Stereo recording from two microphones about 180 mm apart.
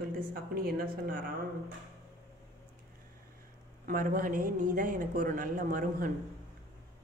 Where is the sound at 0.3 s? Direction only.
55° right (ahead or behind).